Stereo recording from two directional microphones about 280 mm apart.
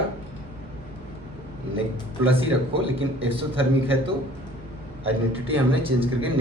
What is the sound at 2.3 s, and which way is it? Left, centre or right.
A man's voice, centre.